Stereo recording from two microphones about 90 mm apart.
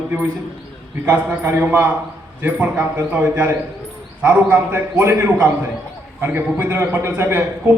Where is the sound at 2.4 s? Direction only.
15° right (ahead or behind).